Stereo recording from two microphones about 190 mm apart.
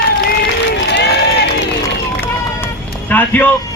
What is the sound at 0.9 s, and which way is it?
Run, 65° left (ahead or behind).